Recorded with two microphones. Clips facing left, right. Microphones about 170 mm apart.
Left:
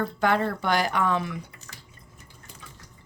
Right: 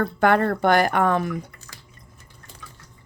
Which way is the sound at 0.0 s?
55° right (ahead or behind).